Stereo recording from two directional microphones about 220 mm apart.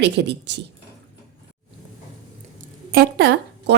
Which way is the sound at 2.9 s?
45° right (ahead or behind).